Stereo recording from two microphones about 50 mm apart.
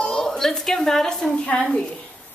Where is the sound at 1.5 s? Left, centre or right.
Left.